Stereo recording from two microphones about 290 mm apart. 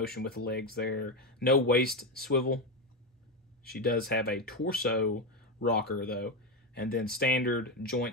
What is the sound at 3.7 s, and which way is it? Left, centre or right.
Speech, left.